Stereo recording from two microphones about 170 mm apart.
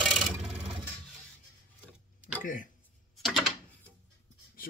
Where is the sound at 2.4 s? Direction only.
50° left (ahead or behind).